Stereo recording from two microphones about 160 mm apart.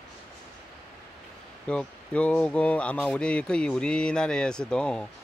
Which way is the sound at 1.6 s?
5° left (ahead or behind).